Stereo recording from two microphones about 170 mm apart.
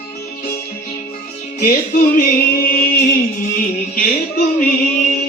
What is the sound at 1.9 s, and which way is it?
Music, 55° left (ahead or behind).